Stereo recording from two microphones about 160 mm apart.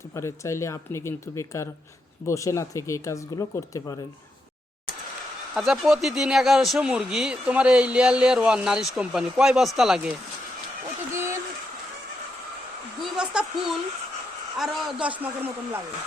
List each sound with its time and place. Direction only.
0.1 s speech: 15° left (ahead or behind)
5.5 s speech: centre (ahead or behind)
13.0 s a sound: 5° right (ahead or behind)
14.6 s a man's voice: 5° right (ahead or behind)